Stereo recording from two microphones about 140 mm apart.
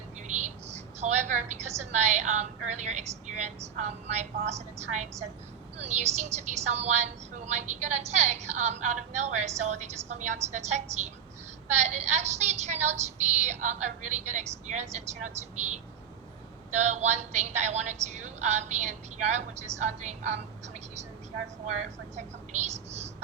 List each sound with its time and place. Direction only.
0.2 s a woman's voice: 55° right (ahead or behind)
22.1 s a woman's voice: 55° right (ahead or behind)